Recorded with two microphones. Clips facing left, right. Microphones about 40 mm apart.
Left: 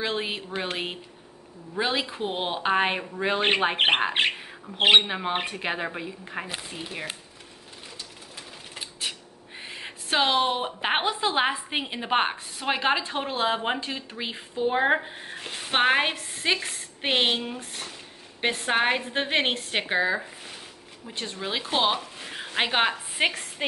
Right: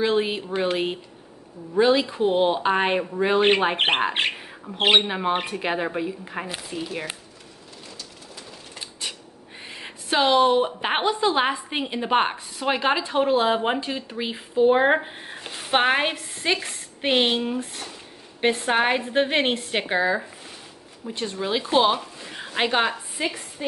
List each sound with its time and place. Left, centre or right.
0.0 s a woman's voice: centre
9.0 s crow: centre
9.6 s a woman's voice: centre
14.6 s speech: centre
15.5 s a woman's voice: centre
22.3 s a sound: centre
23.1 s a woman's voice: left